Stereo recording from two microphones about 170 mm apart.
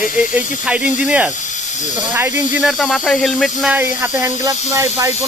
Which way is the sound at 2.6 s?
Centre (ahead or behind).